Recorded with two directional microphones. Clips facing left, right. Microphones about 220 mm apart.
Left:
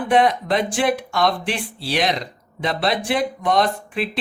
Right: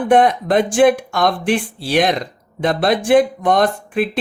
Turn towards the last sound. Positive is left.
turn(degrees=-50)  # may be behind; listen again after turning